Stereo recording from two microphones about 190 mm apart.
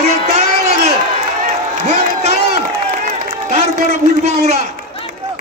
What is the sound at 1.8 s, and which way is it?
Speech, 35° right (ahead or behind).